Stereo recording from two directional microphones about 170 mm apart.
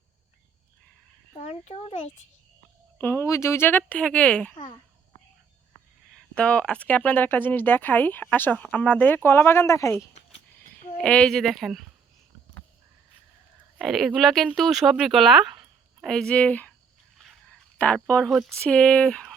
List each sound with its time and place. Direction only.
1.4 s a child's voice: 40° left (ahead or behind)
3.0 s speech: 15° left (ahead or behind)
6.1 s speech: 5° left (ahead or behind)
11.0 s speech: 5° left (ahead or behind)
13.7 s speech: centre (ahead or behind)
17.7 s speech: 10° left (ahead or behind)